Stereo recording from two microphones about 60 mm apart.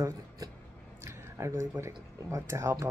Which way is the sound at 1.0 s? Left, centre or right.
Right.